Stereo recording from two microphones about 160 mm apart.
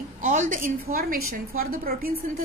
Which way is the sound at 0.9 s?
65° right (ahead or behind).